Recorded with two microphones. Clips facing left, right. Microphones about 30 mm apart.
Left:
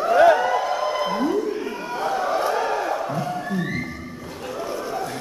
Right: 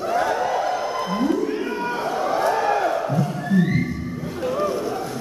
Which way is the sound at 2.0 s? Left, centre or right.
Centre.